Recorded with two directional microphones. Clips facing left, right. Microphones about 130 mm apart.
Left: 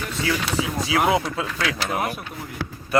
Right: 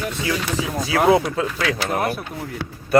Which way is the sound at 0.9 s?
30° right (ahead or behind).